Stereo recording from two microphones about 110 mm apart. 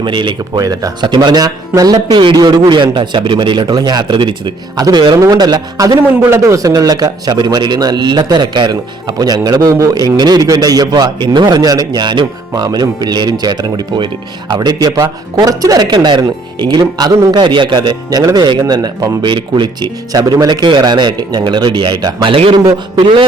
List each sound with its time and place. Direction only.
0.0 s a man's voice: 45° right (ahead or behind)
22.3 s a man's voice: 55° right (ahead or behind)